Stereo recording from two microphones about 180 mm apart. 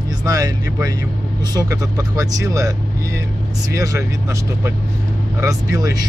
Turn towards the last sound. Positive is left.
turn(degrees=-20)  # may be behind; listen again after turning